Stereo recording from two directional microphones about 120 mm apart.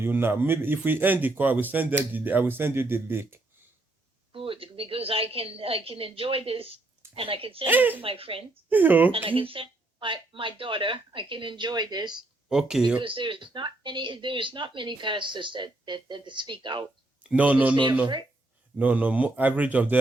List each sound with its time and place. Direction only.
0.0 s speech: 20° right (ahead or behind)
4.3 s a woman's voice: 50° right (ahead or behind)
7.7 s speech: 15° right (ahead or behind)
8.0 s speech: 50° right (ahead or behind)
8.7 s speech: 15° right (ahead or behind)
9.1 s speech: 50° right (ahead or behind)
12.5 s speech: 5° right (ahead or behind)
13.0 s speech: 45° right (ahead or behind)
17.2 s speech: 10° right (ahead or behind)
18.8 s speech: 10° right (ahead or behind)